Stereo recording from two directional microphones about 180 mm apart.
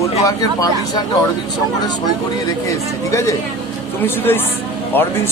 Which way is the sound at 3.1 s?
15° left (ahead or behind).